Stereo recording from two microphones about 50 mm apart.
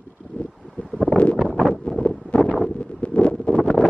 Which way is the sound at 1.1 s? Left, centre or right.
Left.